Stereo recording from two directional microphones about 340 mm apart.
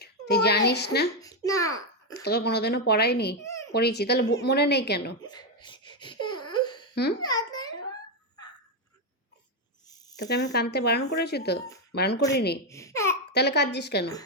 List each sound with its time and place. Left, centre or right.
0.0 s a child's voice: left
1.2 s babbling: centre
2.1 s speech: left
3.4 s a sound: centre
3.7 s speech: left
5.2 s wail: centre
6.9 s a child's voice: left
7.2 s babbling: centre
10.2 s speech: left
12.6 s speech: centre
13.3 s speech: left